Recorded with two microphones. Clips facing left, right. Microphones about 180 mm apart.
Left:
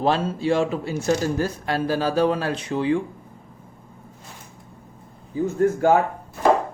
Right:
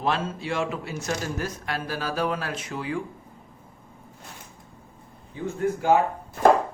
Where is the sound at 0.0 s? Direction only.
30° left (ahead or behind).